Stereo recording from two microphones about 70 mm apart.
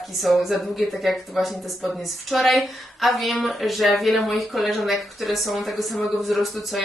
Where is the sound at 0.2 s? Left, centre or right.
Centre.